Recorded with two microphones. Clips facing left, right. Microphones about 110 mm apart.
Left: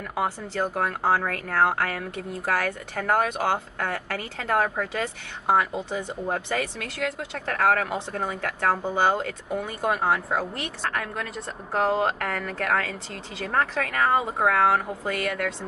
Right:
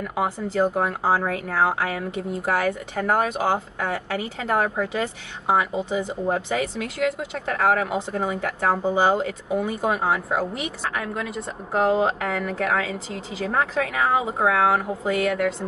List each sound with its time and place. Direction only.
0.0 s speech: 5° right (ahead or behind)